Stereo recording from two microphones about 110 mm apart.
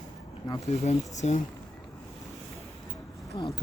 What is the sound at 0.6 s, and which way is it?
Speech, 85° left.